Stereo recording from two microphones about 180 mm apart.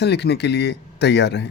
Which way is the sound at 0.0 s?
70° left (ahead or behind).